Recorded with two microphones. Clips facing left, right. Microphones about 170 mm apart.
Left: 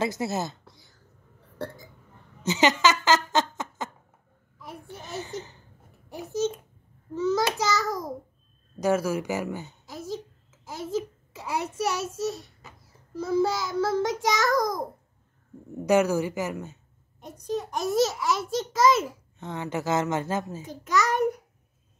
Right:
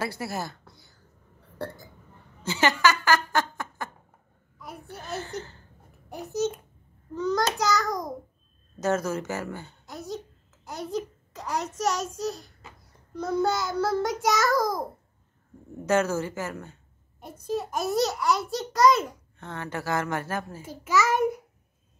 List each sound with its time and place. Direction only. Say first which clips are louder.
0.0 s a woman's voice: left 4 dB; 20° left (ahead or behind)
0.7 s a sound: even; centre (ahead or behind)
2.4 s speech: left 1 dB; 20° left (ahead or behind)
6.1 s a child's voice: even; centre (ahead or behind); by 9.8 s 15° left (ahead or behind)
9.8 s a child's voice: even; centre (ahead or behind)
15.7 s speech: left 3 dB; 15° left (ahead or behind)
17.2 s a child's voice: even; 5° right (ahead or behind)
19.3 s a woman's voice: left 4 dB; 15° left (ahead or behind)
20.6 s a child's voice: right 3 dB; 5° right (ahead or behind)